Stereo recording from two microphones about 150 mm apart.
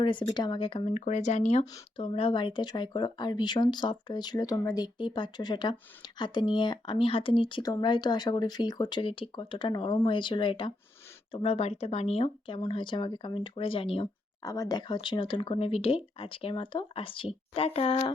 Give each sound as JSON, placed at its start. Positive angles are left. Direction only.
{"t": 0.0, "sound": "speech", "side_deg": 35}
{"t": 0.9, "sound": "speech", "side_deg": 55}
{"t": 2.0, "sound": "speech", "side_deg": 40}
{"t": 14.4, "sound": "speech", "side_deg": 25}